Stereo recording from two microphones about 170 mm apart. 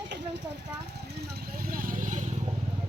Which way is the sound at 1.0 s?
65° right (ahead or behind).